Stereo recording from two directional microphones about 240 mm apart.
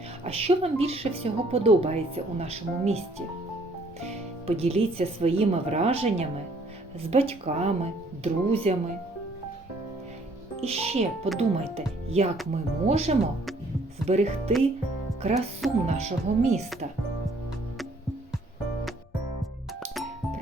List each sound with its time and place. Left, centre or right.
0.3 s speech: right
4.0 s speech: right
10.6 s speech: right
15.6 s speech: centre
16.0 s speech: right